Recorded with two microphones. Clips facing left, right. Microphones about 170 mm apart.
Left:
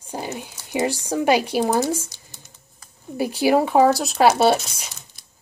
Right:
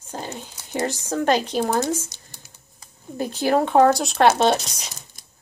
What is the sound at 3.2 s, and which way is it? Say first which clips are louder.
Speech: left 2 dB; 10° left (ahead or behind).